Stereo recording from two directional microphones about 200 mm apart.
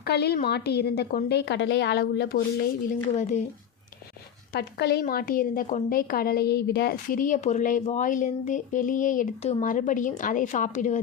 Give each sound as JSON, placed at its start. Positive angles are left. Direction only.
{"t": 0.0, "sound": "a woman's voice", "side_deg": 55}
{"t": 3.2, "sound": "a woman's voice", "side_deg": 35}
{"t": 4.5, "sound": "a woman's voice", "side_deg": 55}